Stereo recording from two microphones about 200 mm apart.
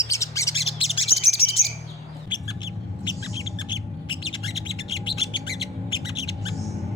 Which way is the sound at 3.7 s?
25° left (ahead or behind).